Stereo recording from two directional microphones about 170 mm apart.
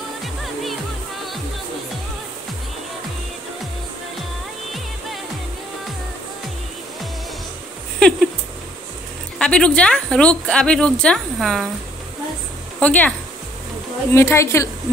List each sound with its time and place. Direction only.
8.0 s speech: 5° left (ahead or behind)
9.4 s speech: 5° left (ahead or behind)
12.8 s speech: 10° left (ahead or behind)
14.1 s speech: 15° left (ahead or behind)